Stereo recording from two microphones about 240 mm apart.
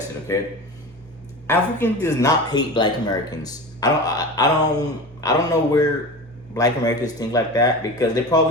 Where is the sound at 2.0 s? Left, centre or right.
Centre.